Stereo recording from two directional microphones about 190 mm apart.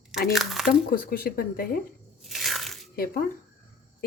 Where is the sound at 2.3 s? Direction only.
Centre (ahead or behind).